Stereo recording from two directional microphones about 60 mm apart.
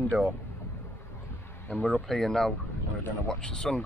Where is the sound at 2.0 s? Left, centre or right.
Centre.